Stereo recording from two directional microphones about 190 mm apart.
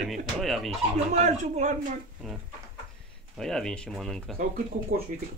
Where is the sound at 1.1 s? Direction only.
40° right (ahead or behind).